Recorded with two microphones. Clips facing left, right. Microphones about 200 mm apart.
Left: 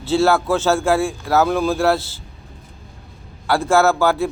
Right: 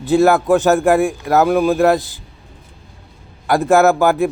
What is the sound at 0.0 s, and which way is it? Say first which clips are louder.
Speech: right 4 dB; 15° right (ahead or behind).